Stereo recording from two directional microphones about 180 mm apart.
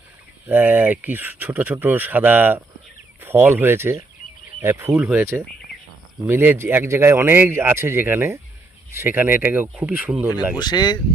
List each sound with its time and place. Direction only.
0.4 s speech: 10° right (ahead or behind)
6.2 s speech: 10° right (ahead or behind)
10.6 s speech: 25° left (ahead or behind)